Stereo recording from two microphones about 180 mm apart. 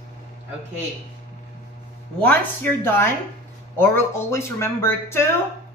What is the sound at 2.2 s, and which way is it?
A woman's voice, 10° left (ahead or behind).